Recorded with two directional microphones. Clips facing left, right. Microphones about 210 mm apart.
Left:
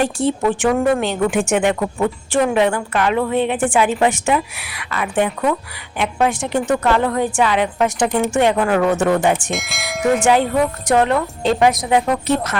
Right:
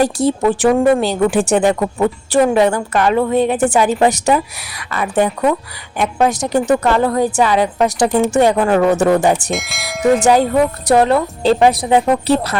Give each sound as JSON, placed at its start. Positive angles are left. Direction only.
{"t": 0.0, "sound": "speech", "side_deg": -40}
{"t": 9.5, "sound": "bell", "side_deg": 0}
{"t": 10.2, "sound": "speech", "side_deg": -40}